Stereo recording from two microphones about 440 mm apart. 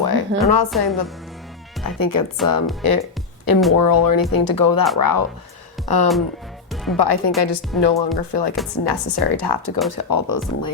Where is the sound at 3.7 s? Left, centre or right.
Left.